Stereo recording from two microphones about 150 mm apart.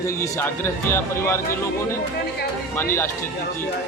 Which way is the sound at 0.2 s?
15° left (ahead or behind).